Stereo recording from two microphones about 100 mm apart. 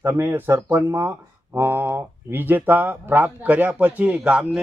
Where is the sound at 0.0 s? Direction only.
25° right (ahead or behind).